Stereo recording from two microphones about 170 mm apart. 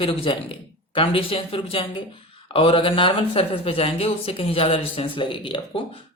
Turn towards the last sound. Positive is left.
turn(degrees=30)  # may be behind; listen again after turning